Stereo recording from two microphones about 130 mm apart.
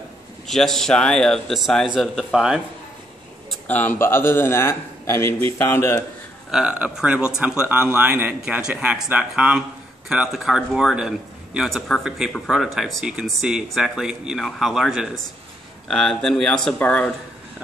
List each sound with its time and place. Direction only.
0.5 s a man's voice: 5° left (ahead or behind)
3.6 s a man's voice: 15° left (ahead or behind)
6.5 s a man's voice: 10° right (ahead or behind); by 17.1 s 10° left (ahead or behind)